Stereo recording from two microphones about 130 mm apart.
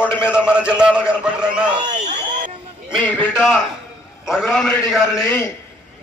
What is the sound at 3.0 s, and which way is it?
Music, 15° left (ahead or behind).